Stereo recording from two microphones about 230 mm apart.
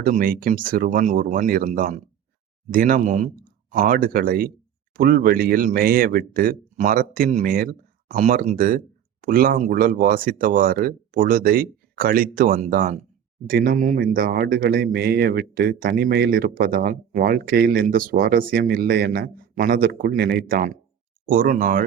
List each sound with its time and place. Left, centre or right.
0.0 s a man's voice: right